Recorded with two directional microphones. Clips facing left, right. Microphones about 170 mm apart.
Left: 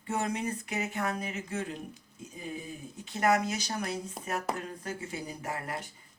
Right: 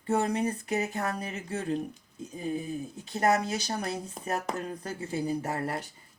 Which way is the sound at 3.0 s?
35° right (ahead or behind).